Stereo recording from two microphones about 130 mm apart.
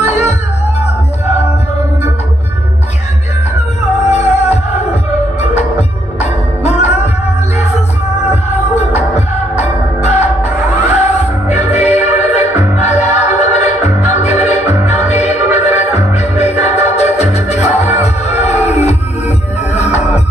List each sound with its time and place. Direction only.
0.0 s music: 55° left (ahead or behind)
4.1 s music: 55° left (ahead or behind)
8.9 s music: 55° left (ahead or behind)